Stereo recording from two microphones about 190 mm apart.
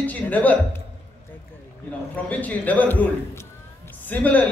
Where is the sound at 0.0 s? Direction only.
10° left (ahead or behind).